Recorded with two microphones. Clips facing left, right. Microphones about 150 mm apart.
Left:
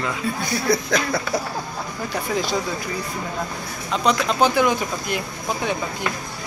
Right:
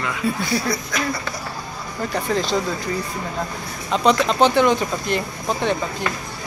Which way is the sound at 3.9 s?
Centre (ahead or behind).